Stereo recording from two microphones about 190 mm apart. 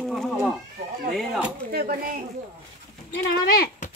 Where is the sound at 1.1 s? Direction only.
Centre (ahead or behind).